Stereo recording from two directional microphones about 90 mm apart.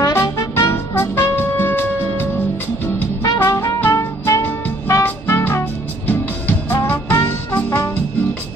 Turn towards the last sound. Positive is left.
turn(degrees=20)  # may be behind; listen again after turning